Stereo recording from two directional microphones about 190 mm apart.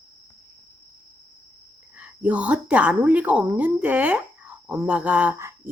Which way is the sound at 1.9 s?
10° right (ahead or behind).